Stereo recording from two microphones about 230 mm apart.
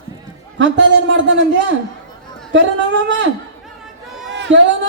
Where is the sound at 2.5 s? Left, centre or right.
Right.